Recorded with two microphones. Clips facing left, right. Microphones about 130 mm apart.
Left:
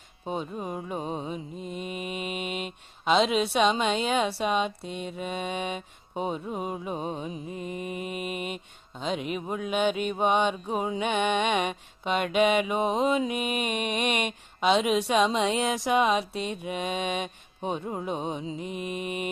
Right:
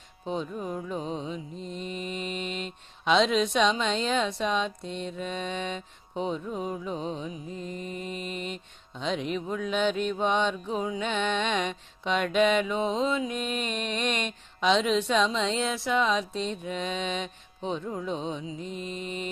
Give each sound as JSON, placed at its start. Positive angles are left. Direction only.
{"t": 0.6, "sound": "mantra", "side_deg": 15}
{"t": 0.9, "sound": "music", "side_deg": 50}
{"t": 1.2, "sound": "mantra", "side_deg": 10}
{"t": 6.7, "sound": "music", "side_deg": 20}
{"t": 6.9, "sound": "music", "side_deg": 50}
{"t": 7.5, "sound": "mantra", "side_deg": 10}
{"t": 12.0, "sound": "music", "side_deg": 50}
{"t": 12.4, "sound": "mantra", "side_deg": 10}
{"t": 18.0, "sound": "music", "side_deg": 55}
{"t": 18.6, "sound": "mantra", "side_deg": 15}